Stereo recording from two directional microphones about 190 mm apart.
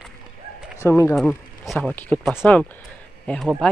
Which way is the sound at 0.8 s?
15° left (ahead or behind).